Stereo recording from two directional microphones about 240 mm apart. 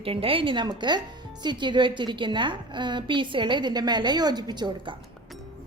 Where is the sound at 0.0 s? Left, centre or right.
Right.